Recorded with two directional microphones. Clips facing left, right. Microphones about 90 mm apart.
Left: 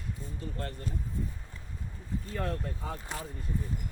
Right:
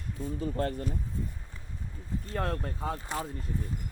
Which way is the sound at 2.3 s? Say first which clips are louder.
Right 3 dB; 45° right (ahead or behind).